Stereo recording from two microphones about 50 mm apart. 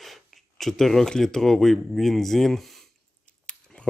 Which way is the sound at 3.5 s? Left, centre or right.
Centre.